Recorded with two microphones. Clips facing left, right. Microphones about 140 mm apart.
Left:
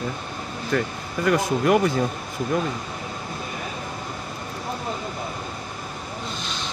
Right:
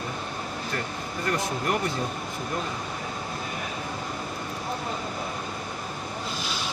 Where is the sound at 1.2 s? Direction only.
90° left.